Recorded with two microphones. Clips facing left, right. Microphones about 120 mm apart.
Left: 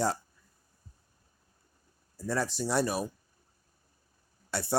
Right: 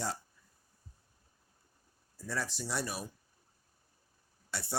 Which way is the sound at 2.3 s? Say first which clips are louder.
Left 7 dB; 40° left (ahead or behind).